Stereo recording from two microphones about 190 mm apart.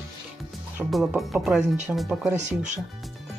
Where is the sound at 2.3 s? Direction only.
40° right (ahead or behind).